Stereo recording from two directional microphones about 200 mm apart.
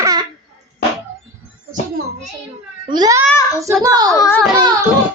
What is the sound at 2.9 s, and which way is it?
A child's voice, 20° right (ahead or behind).